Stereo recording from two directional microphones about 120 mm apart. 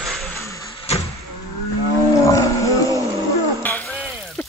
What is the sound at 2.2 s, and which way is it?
Vehicle, 25° left (ahead or behind).